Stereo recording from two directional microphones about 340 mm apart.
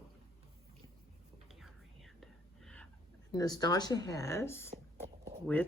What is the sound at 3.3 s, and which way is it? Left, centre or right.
Speech, centre.